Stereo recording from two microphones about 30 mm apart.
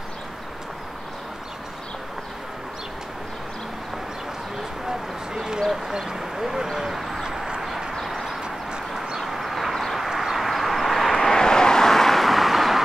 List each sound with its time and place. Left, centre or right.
4.8 s a sound: right
5.7 s speech: centre
7.9 s vehicle: centre
11.1 s vehicle: centre